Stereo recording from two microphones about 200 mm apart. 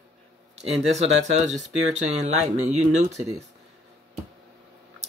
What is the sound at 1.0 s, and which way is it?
Speech, 35° right (ahead or behind).